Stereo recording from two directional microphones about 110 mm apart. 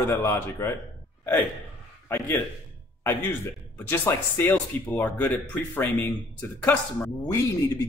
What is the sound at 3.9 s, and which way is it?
Speech, 20° left (ahead or behind).